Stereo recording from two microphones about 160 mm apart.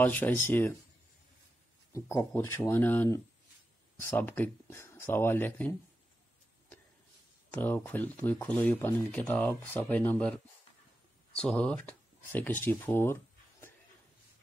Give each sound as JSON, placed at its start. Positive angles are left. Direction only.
{"t": 0.0, "sound": "speech", "side_deg": 10}
{"t": 1.9, "sound": "speech", "side_deg": 20}
{"t": 7.5, "sound": "speech", "side_deg": 10}